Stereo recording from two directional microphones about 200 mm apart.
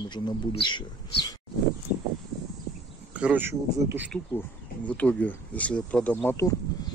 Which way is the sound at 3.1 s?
10° right (ahead or behind).